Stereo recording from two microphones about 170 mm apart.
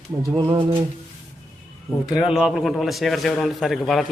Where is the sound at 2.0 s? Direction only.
Centre (ahead or behind).